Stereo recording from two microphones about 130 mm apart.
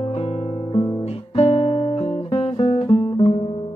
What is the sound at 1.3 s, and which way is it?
Guitar, 50° left (ahead or behind).